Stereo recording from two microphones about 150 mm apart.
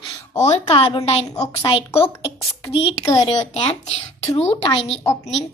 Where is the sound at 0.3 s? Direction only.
45° left (ahead or behind).